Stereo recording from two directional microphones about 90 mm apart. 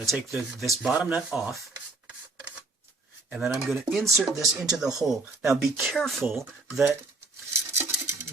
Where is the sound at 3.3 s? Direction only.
5° right (ahead or behind).